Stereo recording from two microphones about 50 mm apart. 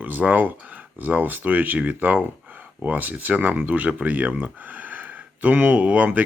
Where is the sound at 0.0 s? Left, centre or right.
Right.